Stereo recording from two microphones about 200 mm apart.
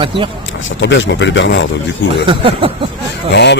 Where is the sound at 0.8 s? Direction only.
65° left (ahead or behind).